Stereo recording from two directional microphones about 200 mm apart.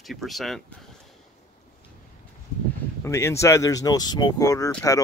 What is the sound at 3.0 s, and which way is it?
Speech, 15° left (ahead or behind).